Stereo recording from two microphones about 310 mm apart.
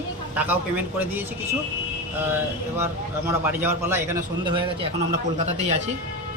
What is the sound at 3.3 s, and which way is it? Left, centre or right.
A man's voice, centre.